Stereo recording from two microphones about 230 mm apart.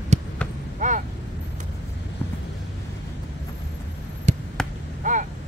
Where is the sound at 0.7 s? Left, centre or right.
Right.